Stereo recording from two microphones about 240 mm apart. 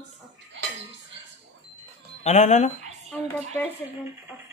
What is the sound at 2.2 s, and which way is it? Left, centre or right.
Speech, left.